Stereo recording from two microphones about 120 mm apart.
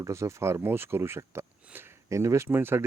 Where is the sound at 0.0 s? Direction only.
25° right (ahead or behind).